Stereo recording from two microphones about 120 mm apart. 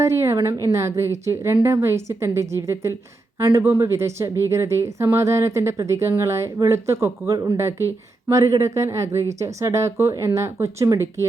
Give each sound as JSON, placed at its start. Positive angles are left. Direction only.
{"t": 0.0, "sound": "speech", "side_deg": -20}